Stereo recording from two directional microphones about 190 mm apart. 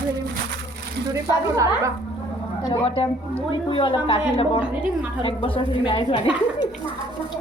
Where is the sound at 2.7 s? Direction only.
30° left (ahead or behind).